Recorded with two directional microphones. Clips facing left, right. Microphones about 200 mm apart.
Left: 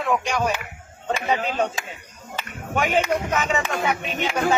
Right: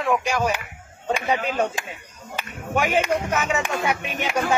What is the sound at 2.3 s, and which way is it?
Speech, 10° right (ahead or behind).